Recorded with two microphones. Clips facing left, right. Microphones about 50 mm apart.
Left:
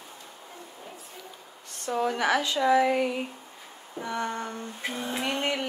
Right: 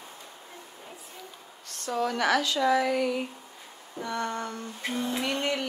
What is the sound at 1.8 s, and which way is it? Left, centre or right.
Speech, left.